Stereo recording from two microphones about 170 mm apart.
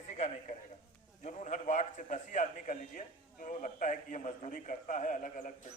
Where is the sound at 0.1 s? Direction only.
45° left (ahead or behind).